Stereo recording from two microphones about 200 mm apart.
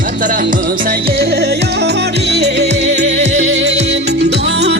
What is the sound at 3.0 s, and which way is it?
Music, 35° right (ahead or behind).